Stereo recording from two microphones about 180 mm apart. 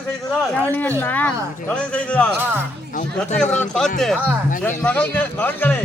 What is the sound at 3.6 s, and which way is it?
Speech, centre (ahead or behind).